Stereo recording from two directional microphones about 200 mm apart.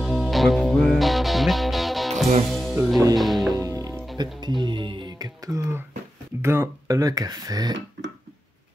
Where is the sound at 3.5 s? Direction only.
15° right (ahead or behind).